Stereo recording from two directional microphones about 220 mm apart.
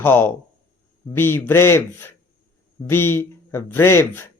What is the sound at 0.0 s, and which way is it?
Speech, 10° left (ahead or behind).